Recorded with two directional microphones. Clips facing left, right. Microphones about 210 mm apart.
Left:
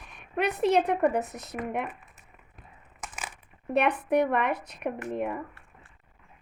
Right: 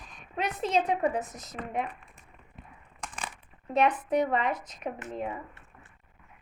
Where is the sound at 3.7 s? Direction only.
65° left (ahead or behind).